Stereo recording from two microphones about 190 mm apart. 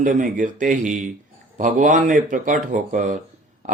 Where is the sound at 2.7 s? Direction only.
40° right (ahead or behind).